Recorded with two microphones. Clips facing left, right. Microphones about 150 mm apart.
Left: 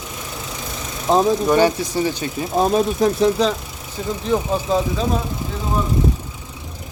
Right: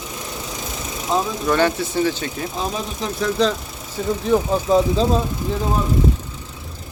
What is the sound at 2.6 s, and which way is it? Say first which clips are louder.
Speech: left 11 dB; 45° left (ahead or behind).